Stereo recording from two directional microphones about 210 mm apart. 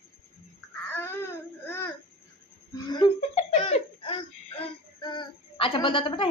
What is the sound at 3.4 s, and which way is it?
Laughter, 30° left (ahead or behind).